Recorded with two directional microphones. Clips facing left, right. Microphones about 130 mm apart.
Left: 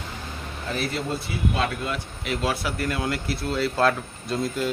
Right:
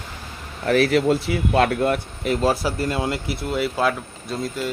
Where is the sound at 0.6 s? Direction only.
85° right; by 4.7 s 5° right (ahead or behind).